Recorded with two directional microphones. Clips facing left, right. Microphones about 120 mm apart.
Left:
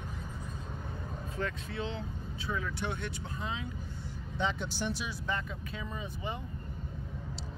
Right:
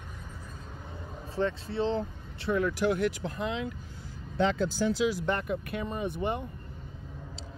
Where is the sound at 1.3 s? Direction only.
35° right (ahead or behind).